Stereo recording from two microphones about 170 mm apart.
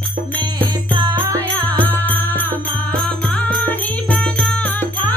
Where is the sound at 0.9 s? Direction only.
30° right (ahead or behind).